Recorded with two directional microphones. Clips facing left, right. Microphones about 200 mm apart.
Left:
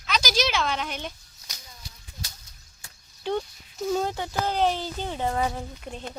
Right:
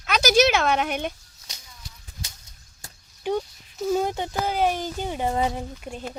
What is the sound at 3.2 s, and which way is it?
Speech, 5° right (ahead or behind).